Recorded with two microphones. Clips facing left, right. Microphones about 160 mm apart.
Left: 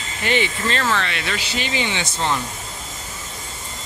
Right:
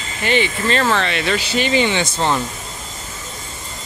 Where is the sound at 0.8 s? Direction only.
30° right (ahead or behind).